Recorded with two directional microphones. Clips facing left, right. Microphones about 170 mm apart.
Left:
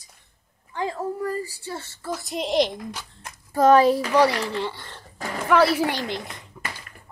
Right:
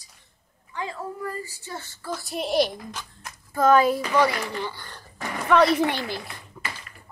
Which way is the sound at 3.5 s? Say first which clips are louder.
Left 3 dB; 35° left (ahead or behind).